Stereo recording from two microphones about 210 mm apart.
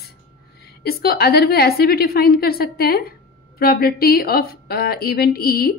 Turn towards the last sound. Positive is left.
turn(degrees=45)  # may be behind; listen again after turning